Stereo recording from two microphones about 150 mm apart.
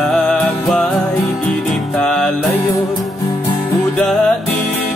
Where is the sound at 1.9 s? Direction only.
5° left (ahead or behind).